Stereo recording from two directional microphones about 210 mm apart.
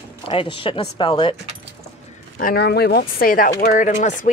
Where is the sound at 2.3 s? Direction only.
45° left (ahead or behind).